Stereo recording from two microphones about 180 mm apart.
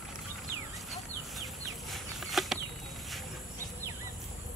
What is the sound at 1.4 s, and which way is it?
Bird flight, centre (ahead or behind).